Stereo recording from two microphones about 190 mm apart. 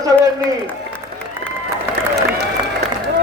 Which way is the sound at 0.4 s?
10° left (ahead or behind).